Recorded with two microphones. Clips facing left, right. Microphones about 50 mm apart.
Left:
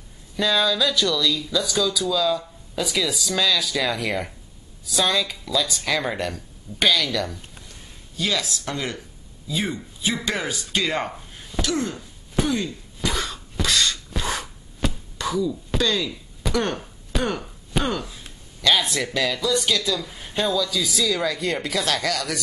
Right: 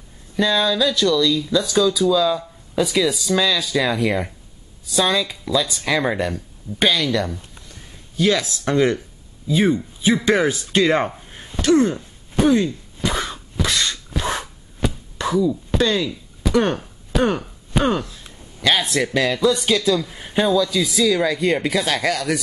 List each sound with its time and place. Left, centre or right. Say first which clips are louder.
0.4 s speech: right 3 dB; centre; by 11.1 s right
11.8 s cough: right 9 dB; centre
14.1 s a sound: right 3 dB; centre
14.8 s chop: right 3 dB; centre
15.1 s wail: right 6 dB; right
15.8 s speech: right 4 dB; right
17.1 s chop: right 6 dB; centre
18.6 s speech: right 2 dB; centre